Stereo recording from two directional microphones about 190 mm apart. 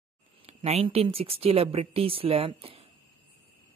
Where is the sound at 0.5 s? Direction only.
35° right (ahead or behind).